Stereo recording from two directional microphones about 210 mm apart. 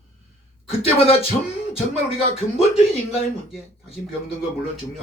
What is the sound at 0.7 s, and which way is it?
Speech, 30° left (ahead or behind).